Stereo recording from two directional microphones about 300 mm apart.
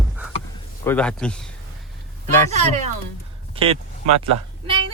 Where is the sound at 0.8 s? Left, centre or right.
Centre.